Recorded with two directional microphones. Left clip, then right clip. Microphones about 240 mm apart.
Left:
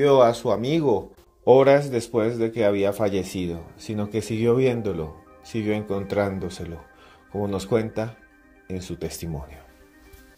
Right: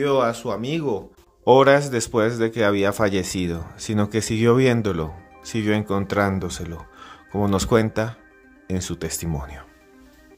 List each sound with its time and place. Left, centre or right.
0.0 s speech: centre
1.4 s speech: centre